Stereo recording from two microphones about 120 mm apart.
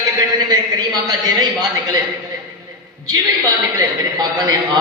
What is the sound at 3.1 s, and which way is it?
A man's voice, 35° right (ahead or behind).